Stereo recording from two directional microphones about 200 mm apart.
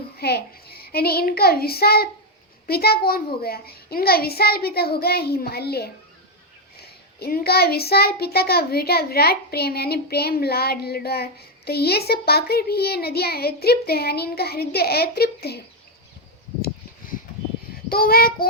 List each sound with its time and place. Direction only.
0.2 s a child's voice: 50° left (ahead or behind)
17.8 s a child's voice: 50° left (ahead or behind)